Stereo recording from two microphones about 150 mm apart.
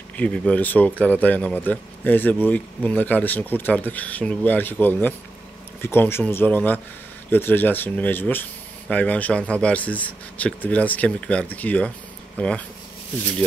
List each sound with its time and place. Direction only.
0.2 s speech: 10° left (ahead or behind)